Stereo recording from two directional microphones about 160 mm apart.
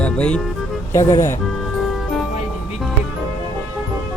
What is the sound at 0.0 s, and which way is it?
Speech, 5° left (ahead or behind).